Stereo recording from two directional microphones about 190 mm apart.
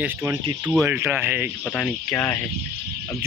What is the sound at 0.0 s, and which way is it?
Speech, 15° right (ahead or behind).